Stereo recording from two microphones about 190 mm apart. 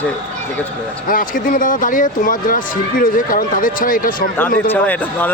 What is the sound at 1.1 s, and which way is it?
Speech, 45° left (ahead or behind).